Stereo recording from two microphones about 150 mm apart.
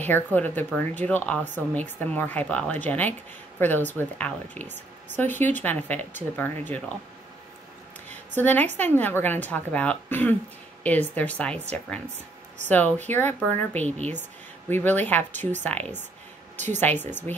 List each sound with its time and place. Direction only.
0.0 s speech: 10° left (ahead or behind)
8.1 s a sound: 10° left (ahead or behind)
8.7 s speech: 10° left (ahead or behind)
12.6 s speech: 10° left (ahead or behind)
16.5 s a woman's voice: 55° right (ahead or behind)
17.3 s speech: 10° left (ahead or behind)